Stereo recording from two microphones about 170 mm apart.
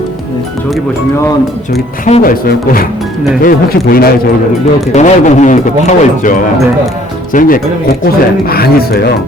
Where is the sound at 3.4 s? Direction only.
60° left (ahead or behind).